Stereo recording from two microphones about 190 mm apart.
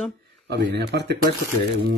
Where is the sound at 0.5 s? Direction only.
65° right (ahead or behind).